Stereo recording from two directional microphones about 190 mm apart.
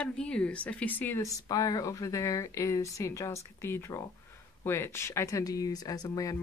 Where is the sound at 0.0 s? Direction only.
5° left (ahead or behind).